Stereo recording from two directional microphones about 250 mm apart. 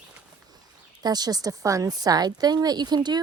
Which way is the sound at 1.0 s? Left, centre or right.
Centre.